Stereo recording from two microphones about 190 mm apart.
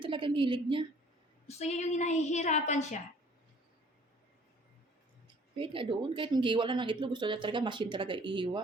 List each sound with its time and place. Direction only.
0.0 s speech: 25° right (ahead or behind)
1.5 s a woman's voice: 35° left (ahead or behind)
5.5 s speech: 25° right (ahead or behind)